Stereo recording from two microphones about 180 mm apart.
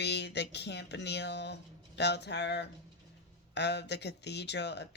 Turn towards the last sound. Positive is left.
turn(degrees=70)  # may be behind; listen again after turning